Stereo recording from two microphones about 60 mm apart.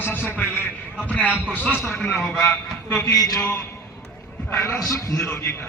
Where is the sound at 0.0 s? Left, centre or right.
Left.